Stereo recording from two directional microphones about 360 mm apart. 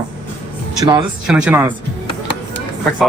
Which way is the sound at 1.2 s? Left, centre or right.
Centre.